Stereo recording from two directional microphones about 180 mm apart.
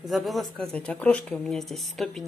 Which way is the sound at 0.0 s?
Centre (ahead or behind).